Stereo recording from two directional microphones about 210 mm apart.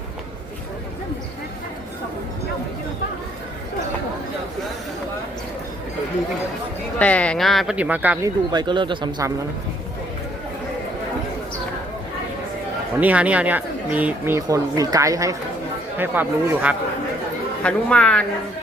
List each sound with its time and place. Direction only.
7.0 s speech: 5° left (ahead or behind)
8.5 s speech: 20° right (ahead or behind)
13.0 s speech: 5° right (ahead or behind)
17.6 s speech: 5° left (ahead or behind)